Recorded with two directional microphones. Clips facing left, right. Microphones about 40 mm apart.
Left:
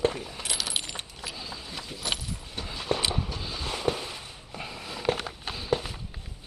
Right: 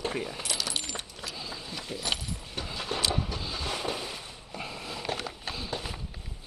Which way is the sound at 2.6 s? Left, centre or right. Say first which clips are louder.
Right 1 dB; centre.